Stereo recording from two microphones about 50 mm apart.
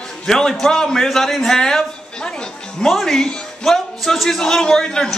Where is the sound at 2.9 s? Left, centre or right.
Centre.